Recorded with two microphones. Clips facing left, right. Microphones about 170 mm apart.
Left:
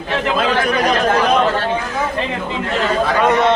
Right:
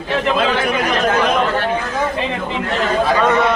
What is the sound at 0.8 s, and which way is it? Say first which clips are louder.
Speech: left 2 dB; 35° left (ahead or behind).